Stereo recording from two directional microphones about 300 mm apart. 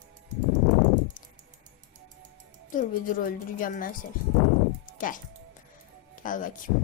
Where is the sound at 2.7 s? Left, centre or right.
Left.